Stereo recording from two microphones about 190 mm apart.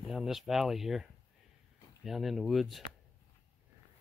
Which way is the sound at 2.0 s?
Centre (ahead or behind).